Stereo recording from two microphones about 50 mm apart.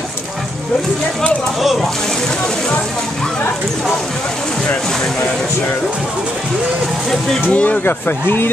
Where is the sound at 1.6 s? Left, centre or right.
Centre.